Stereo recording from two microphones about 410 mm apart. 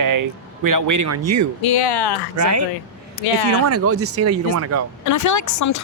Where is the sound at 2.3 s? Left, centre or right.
Right.